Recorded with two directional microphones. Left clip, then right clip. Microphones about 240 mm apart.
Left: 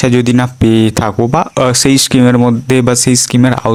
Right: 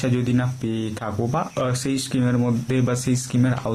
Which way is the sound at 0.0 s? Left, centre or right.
Left.